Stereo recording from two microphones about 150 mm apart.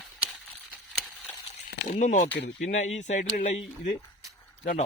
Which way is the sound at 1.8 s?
60° left (ahead or behind).